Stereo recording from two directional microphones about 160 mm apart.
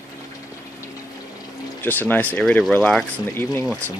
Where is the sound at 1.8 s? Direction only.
10° left (ahead or behind).